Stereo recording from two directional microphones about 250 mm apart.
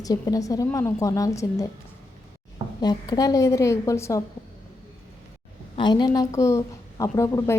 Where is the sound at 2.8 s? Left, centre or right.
Centre.